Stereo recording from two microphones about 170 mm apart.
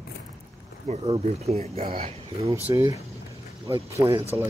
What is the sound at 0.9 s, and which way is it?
Speech, 35° right (ahead or behind).